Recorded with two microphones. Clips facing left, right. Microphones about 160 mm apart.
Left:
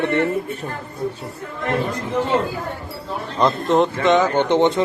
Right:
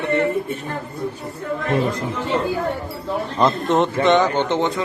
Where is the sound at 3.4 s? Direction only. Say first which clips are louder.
Left 1 dB; centre (ahead or behind).